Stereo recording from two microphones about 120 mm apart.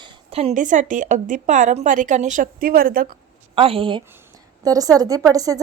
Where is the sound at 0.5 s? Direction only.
90° right.